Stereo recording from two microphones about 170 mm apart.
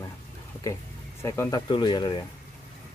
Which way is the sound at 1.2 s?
20° left (ahead or behind).